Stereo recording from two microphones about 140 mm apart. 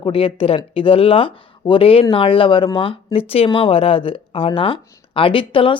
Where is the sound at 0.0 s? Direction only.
40° left (ahead or behind).